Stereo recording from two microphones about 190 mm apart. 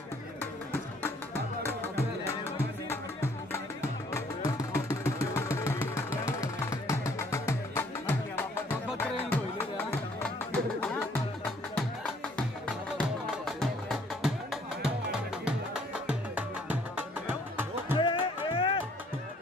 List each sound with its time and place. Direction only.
1.6 s music: 10° left (ahead or behind)
4.1 s vehicle: 15° left (ahead or behind)
9.3 s music: 10° left (ahead or behind)
13.5 s music: centre (ahead or behind)
17.9 s music: 25° left (ahead or behind)